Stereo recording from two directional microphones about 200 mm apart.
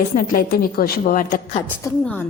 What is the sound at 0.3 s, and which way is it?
A woman's voice, 45° left (ahead or behind).